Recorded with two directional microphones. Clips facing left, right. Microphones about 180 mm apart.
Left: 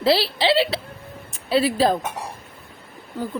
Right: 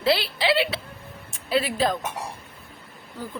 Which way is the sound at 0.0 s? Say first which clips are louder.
Left 4 dB; 30° left (ahead or behind).